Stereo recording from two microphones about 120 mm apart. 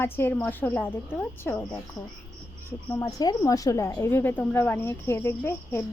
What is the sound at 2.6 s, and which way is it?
Speech, 25° left (ahead or behind).